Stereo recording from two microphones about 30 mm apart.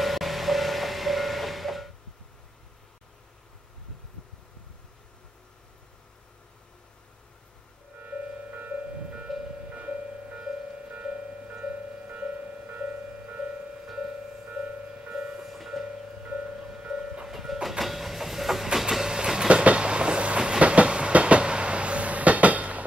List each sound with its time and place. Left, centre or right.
0.0 s train: centre
8.0 s music: right
9.3 s music: centre
9.7 s music: right
10.3 s music: right
15.0 s music: right
15.4 s music: centre
16.5 s music: centre
17.3 s train: centre
19.0 s train: right
19.5 s train: right